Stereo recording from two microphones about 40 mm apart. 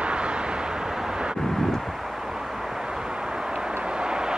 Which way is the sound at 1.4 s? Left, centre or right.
Centre.